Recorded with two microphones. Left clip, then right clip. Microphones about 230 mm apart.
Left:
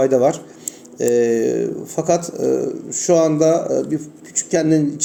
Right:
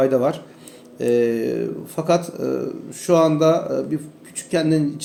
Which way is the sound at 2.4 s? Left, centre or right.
Centre.